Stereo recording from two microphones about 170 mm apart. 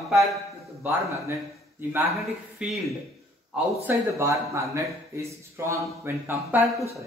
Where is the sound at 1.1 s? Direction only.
15° right (ahead or behind).